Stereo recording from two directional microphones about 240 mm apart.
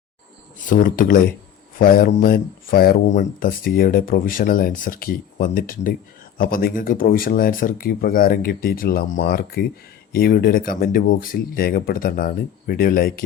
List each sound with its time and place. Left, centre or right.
0.7 s speech: left